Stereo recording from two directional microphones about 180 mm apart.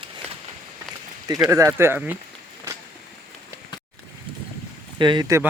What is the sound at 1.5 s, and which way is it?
Speech, 15° right (ahead or behind).